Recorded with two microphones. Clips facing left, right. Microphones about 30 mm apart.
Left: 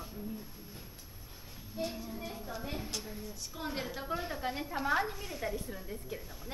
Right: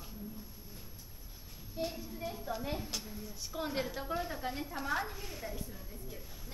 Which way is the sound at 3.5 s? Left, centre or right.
Centre.